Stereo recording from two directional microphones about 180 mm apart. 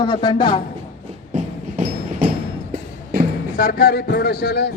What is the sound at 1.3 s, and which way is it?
Music, 40° right (ahead or behind).